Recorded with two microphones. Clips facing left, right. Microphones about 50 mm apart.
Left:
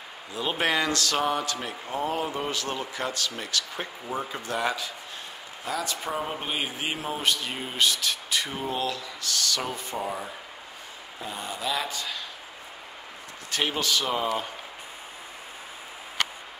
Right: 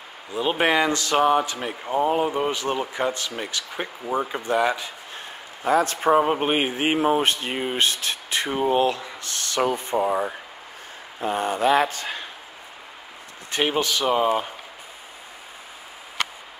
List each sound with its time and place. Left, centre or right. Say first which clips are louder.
0.3 s speech: right 5 dB; centre
5.7 s a man's voice: right 12 dB; right
11.1 s speech: right 11 dB; right
13.5 s speech: right 4 dB; right